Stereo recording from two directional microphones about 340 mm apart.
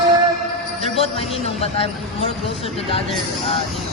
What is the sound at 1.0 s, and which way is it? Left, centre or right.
Speech, centre.